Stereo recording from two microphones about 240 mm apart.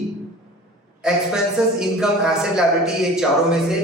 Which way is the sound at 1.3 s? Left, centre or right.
Centre.